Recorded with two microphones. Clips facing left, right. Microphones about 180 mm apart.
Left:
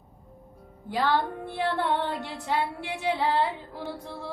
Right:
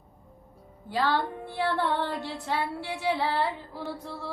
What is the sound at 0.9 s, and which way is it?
Female singing, 15° left (ahead or behind).